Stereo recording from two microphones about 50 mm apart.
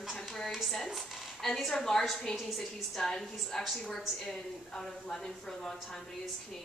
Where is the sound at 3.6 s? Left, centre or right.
Centre.